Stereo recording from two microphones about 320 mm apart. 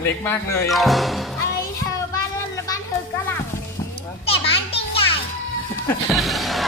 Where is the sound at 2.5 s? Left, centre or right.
Centre.